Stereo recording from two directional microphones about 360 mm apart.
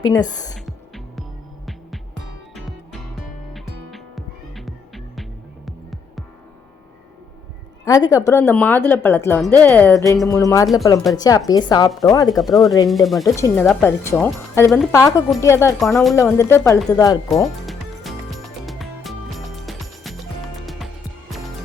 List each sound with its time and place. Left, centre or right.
0.0 s speech: centre
0.6 s music: centre
2.6 s music: centre
7.9 s a woman's voice: centre
19.6 s music: centre